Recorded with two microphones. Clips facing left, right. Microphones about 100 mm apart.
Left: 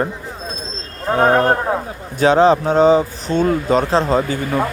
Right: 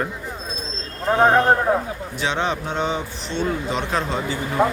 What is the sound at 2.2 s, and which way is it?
Speech, 40° left (ahead or behind).